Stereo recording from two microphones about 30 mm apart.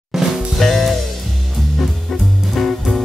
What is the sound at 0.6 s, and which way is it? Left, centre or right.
Music, centre.